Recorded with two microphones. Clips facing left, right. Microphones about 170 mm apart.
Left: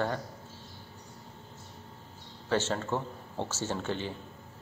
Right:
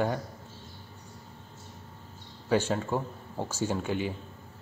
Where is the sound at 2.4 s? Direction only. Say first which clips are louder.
Right 3 dB; 10° right (ahead or behind).